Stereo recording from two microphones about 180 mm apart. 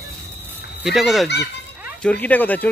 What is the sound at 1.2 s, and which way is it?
Speech, 70° left (ahead or behind).